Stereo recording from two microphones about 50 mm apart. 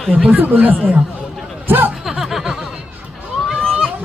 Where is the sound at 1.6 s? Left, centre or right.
Right.